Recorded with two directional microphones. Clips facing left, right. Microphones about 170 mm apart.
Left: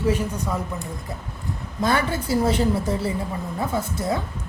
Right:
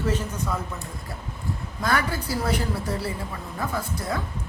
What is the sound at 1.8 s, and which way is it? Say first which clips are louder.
A woman's voice: left 3 dB; 25° left (ahead or behind).